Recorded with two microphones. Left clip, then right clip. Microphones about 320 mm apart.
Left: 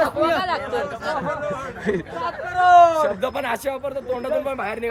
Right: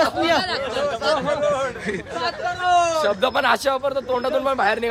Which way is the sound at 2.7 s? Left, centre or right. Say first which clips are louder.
Left 6 dB; left.